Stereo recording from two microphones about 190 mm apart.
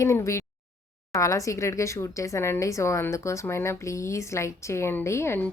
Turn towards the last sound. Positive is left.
turn(degrees=10)  # may be behind; listen again after turning